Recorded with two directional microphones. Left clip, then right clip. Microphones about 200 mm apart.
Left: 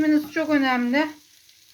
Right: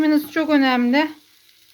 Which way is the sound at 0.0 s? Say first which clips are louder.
Right 3 dB; 50° right (ahead or behind).